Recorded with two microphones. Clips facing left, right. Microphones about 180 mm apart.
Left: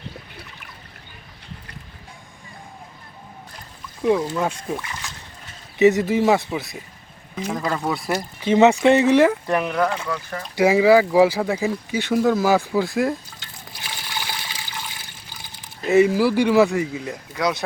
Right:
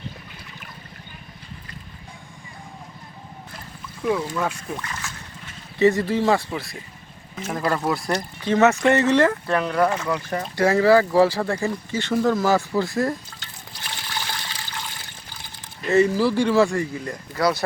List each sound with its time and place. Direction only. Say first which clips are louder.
4.0 s speech: left 3 dB; 25° left (ahead or behind)
7.4 s speech: right 1 dB; 5° right (ahead or behind)
8.4 s speech: left 3 dB; 15° left (ahead or behind)
9.7 s speech: right 1 dB; 5° right (ahead or behind)
10.6 s speech: left 2 dB; 10° left (ahead or behind)
13.8 s toilet flush: even; 10° left (ahead or behind)
15.9 s speech: left 2 dB; 10° left (ahead or behind)